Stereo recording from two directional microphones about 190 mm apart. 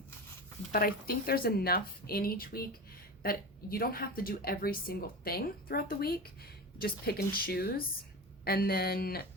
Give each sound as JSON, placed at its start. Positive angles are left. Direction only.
{"t": 0.7, "sound": "a woman's voice", "side_deg": 50}